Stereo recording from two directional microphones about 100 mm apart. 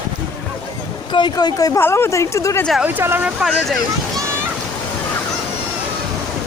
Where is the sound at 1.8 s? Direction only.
25° left (ahead or behind).